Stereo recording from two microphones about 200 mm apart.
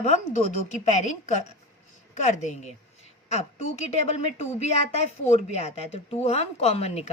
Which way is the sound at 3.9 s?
30° left (ahead or behind).